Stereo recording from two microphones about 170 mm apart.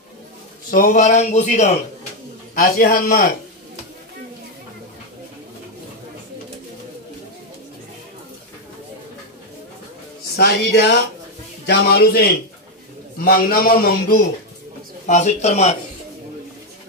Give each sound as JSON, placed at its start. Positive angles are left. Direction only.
{"t": 0.7, "sound": "a man's voice", "side_deg": 55}
{"t": 2.5, "sound": "a man's voice", "side_deg": 55}
{"t": 10.3, "sound": "a man's voice", "side_deg": 75}
{"t": 15.0, "sound": "a man's voice", "side_deg": 45}